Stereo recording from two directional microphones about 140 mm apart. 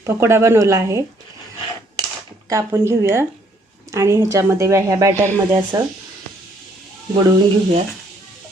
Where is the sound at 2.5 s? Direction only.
20° right (ahead or behind).